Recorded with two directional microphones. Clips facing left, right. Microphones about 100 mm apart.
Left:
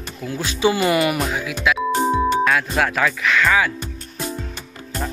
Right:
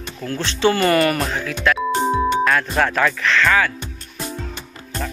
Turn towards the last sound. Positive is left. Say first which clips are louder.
# right 1 dB
turn(degrees=10)  # may be behind; listen again after turning